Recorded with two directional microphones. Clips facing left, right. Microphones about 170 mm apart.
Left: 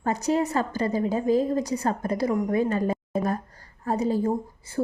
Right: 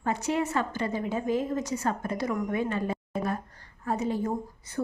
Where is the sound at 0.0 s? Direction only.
40° left (ahead or behind).